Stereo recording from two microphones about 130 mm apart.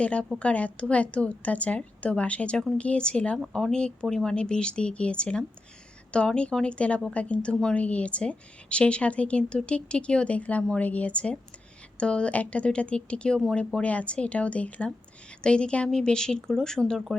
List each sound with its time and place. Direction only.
0.0 s speech: 10° left (ahead or behind)